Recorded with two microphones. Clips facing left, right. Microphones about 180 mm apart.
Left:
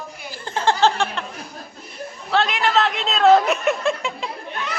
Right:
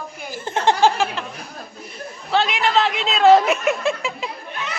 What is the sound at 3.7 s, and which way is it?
Chuckle, centre (ahead or behind).